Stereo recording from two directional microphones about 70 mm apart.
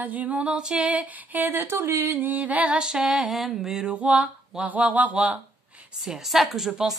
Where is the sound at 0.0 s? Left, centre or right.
Right; by 3.9 s centre.